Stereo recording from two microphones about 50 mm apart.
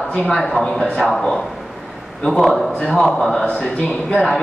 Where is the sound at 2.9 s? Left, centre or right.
Centre.